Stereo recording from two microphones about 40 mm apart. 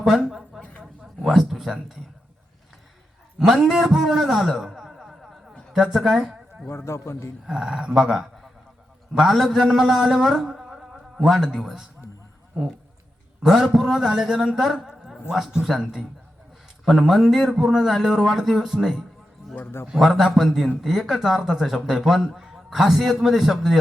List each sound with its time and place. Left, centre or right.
0.0 s a sound: centre
1.3 s speech: centre
3.3 s a man's voice: centre
4.5 s a sound: centre
5.7 s a woman's voice: centre
6.7 s a man's voice: left
7.4 s a man's voice: centre
10.6 s a sound: centre
13.4 s a man's voice: centre
17.6 s a man's voice: centre
19.6 s a man's voice: left
19.9 s a man's voice: centre